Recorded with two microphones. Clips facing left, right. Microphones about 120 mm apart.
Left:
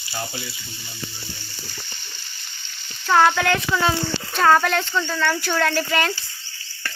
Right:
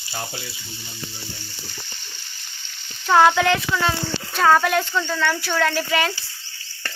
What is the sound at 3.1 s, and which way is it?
Speech, 15° right (ahead or behind).